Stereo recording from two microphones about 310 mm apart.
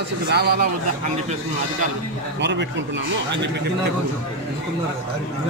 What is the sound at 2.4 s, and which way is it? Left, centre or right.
Speech, right.